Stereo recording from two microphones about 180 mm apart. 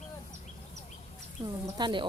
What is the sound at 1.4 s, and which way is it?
Speech, 25° right (ahead or behind).